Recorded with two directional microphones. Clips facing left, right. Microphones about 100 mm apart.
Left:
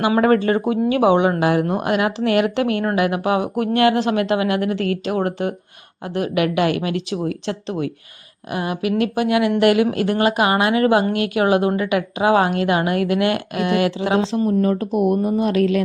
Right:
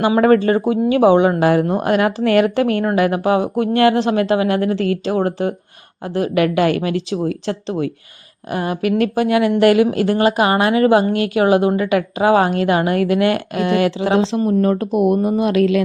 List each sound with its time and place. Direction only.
0.2 s a woman's voice: 35° right (ahead or behind)
14.2 s speech: 80° right
14.4 s speech: 60° right (ahead or behind); by 15.8 s 90° right